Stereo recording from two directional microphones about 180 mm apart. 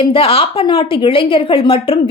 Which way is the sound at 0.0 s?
30° left (ahead or behind).